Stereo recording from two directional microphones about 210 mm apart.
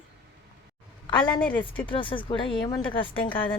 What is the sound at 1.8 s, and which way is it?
A woman's voice, 25° left (ahead or behind).